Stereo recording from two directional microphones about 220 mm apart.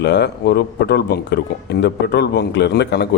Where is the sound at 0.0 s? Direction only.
50° left (ahead or behind).